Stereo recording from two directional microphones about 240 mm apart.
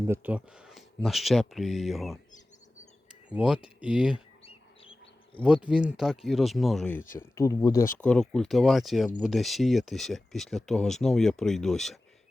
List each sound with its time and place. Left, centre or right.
0.1 s speech: centre
3.2 s speech: centre
4.4 s bird: left
5.6 s speech: centre